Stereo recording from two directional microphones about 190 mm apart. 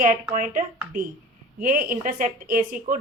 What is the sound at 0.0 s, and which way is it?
A woman's voice, 45° right (ahead or behind).